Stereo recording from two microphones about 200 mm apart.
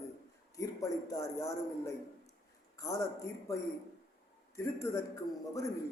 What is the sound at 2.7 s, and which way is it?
Speech, 15° left (ahead or behind).